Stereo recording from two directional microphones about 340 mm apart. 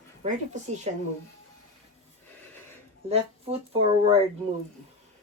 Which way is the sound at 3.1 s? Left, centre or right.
Centre.